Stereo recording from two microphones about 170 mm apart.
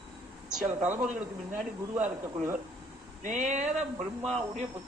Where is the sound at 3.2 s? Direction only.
45° right (ahead or behind).